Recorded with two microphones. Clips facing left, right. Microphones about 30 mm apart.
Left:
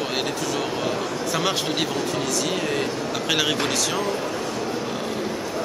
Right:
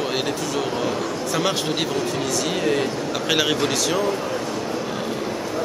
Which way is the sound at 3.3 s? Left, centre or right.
Centre.